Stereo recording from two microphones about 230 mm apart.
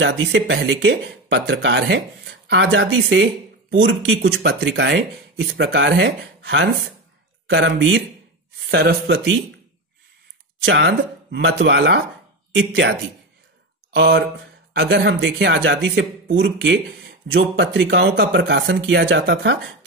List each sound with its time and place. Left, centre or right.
0.0 s speech: right
10.6 s speech: right
13.9 s speech: right